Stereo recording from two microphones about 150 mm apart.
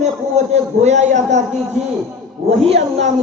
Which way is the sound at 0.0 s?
50° right (ahead or behind).